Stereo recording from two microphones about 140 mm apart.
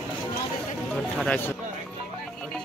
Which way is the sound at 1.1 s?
10° left (ahead or behind).